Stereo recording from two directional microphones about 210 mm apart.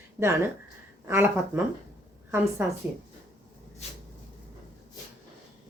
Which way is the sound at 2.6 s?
10° right (ahead or behind).